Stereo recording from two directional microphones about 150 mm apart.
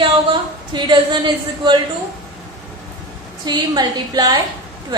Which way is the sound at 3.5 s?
25° right (ahead or behind).